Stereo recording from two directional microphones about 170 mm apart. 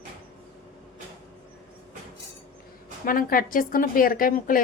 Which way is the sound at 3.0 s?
55° left (ahead or behind).